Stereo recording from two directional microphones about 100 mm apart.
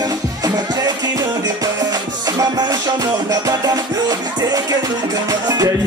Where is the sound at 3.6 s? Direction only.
35° right (ahead or behind).